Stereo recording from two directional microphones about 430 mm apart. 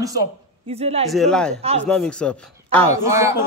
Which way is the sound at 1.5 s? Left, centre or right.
Centre.